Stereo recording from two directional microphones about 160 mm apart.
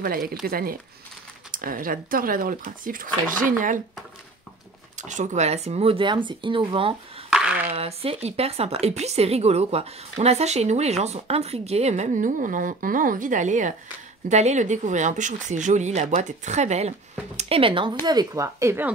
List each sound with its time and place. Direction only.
0.0 s speech: 70° right (ahead or behind)
4.9 s speech: 50° right (ahead or behind); by 7.0 s 35° right (ahead or behind)
7.2 s a sound: 5° right (ahead or behind)
7.7 s speech: 40° right (ahead or behind); by 18.9 s 15° right (ahead or behind)